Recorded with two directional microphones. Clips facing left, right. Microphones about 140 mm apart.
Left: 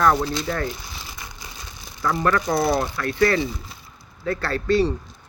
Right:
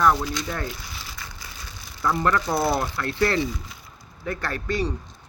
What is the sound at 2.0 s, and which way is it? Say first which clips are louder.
Speech: left 1 dB; 20° right (ahead or behind).